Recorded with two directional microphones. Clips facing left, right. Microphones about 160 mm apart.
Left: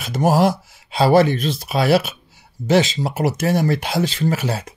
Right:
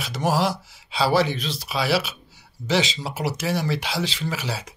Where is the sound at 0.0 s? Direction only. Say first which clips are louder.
Left 6 dB; 50° left (ahead or behind).